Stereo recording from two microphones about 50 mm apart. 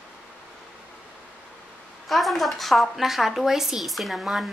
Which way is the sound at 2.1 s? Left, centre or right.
Centre.